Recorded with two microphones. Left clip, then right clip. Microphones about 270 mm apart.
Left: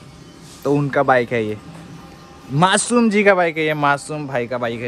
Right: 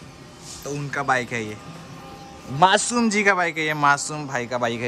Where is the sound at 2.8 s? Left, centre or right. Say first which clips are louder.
Left 5 dB; centre.